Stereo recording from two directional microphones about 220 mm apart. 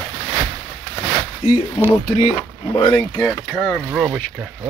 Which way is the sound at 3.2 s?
Centre (ahead or behind).